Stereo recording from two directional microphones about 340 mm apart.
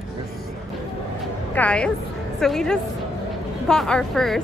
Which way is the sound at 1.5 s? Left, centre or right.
Centre.